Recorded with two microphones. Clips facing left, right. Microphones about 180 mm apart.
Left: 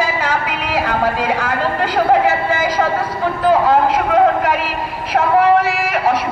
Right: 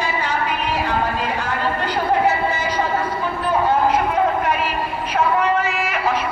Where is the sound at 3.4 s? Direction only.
90° left.